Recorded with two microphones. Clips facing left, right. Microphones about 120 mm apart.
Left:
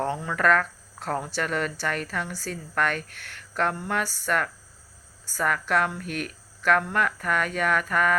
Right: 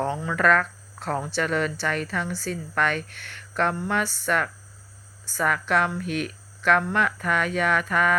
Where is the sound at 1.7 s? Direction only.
45° left (ahead or behind).